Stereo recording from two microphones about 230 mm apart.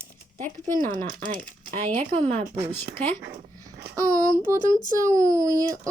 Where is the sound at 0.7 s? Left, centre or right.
Right.